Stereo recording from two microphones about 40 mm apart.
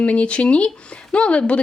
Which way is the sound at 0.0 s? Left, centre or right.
Left.